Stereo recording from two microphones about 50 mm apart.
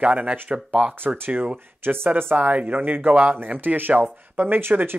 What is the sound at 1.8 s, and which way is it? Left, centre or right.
Speech, right.